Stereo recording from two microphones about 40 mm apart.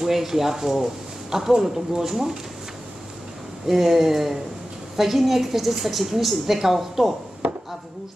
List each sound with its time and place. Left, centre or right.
0.0 s speech: centre
3.6 s a woman's voice: centre
7.4 s chopping: right